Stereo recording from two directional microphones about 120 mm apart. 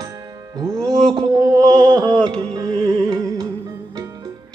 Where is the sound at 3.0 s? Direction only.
35° right (ahead or behind).